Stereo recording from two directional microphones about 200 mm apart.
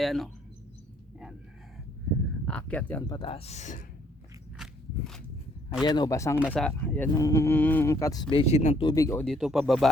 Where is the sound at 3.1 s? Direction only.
25° left (ahead or behind).